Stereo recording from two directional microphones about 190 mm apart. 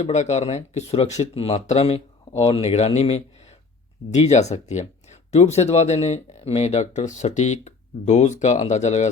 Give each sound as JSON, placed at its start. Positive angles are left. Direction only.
{"t": 0.0, "sound": "speech", "side_deg": 35}